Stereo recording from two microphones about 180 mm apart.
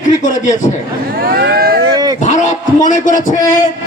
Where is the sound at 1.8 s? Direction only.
20° right (ahead or behind).